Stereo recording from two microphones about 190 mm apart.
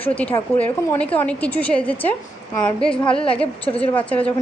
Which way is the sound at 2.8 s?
30° left (ahead or behind).